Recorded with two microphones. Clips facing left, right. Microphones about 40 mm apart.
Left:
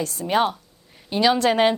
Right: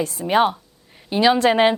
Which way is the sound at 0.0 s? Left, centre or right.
Centre.